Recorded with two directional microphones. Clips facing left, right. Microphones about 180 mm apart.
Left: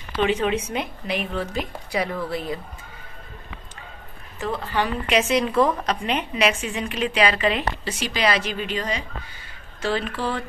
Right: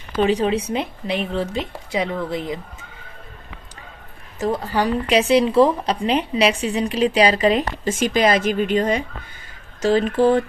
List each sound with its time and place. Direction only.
0.1 s a woman's voice: 40° right (ahead or behind); by 2.6 s 20° right (ahead or behind)
4.4 s speech: 40° right (ahead or behind)
9.8 s speech: 45° right (ahead or behind)